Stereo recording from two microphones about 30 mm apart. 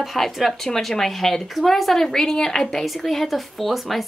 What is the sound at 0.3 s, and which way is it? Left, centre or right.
Speech, centre.